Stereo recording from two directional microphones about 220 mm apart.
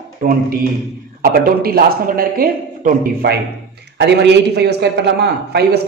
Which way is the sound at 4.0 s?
50° right (ahead or behind).